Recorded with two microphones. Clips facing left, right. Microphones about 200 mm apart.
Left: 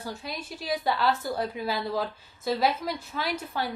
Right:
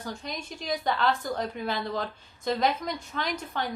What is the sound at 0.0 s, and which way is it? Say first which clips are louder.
A woman's voice: even; 5° left (ahead or behind).